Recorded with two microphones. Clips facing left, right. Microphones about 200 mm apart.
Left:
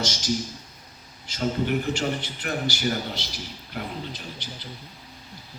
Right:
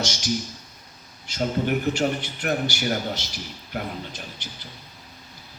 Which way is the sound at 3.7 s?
50° right (ahead or behind).